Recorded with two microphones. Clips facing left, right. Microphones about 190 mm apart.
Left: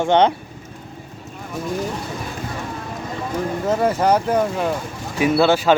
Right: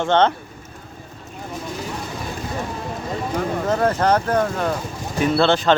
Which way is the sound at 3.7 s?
10° left (ahead or behind).